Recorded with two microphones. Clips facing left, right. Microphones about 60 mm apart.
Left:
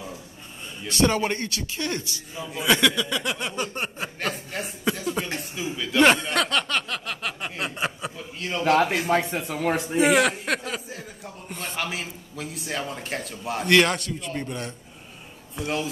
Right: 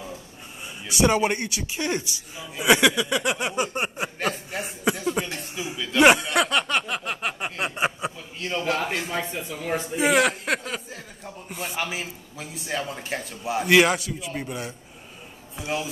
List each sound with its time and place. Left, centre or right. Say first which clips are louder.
0.8 s speech: right 1 dB; centre
4.2 s a sound: right 1 dB; centre
5.5 s speech: left 1 dB; centre
5.9 s a sound: right 2 dB; centre
8.4 s speech: even; centre
9.3 s speech: left 4 dB; left
9.9 s a man's voice: even; centre